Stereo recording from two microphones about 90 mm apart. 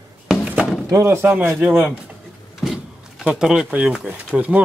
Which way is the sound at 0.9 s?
30° right (ahead or behind).